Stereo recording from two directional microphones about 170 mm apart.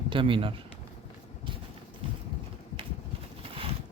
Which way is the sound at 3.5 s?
35° right (ahead or behind).